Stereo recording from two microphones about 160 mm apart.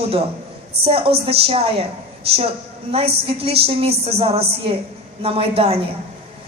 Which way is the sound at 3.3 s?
35° right (ahead or behind).